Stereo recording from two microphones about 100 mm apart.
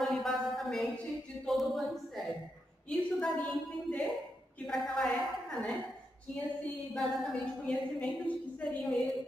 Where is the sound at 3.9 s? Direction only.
5° left (ahead or behind).